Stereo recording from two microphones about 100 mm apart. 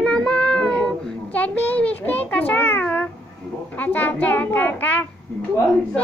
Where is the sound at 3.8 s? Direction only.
15° left (ahead or behind).